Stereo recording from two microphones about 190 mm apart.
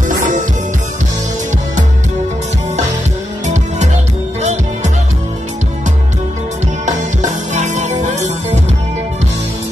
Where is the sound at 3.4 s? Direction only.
40° right (ahead or behind).